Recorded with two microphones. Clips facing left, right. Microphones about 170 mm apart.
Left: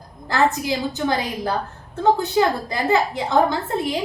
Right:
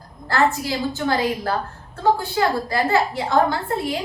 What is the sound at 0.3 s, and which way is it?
A woman's voice, 20° left (ahead or behind).